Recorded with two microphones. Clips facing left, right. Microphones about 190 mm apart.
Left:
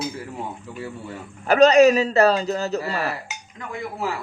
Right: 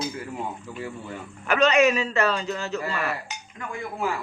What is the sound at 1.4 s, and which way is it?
A man's voice, 40° left (ahead or behind).